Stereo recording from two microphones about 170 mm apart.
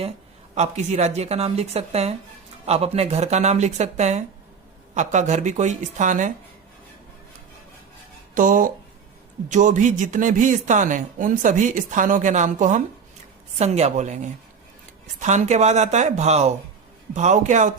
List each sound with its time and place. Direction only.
0.5 s speech: 40° right (ahead or behind)
8.4 s speech: 50° right (ahead or behind)